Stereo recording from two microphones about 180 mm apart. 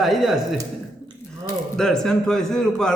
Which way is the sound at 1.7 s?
5° left (ahead or behind).